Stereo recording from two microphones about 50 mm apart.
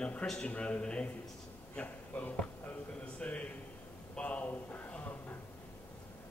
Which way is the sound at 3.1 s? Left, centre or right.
Left.